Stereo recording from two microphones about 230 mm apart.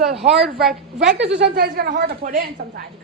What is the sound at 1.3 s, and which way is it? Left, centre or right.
Speech, right.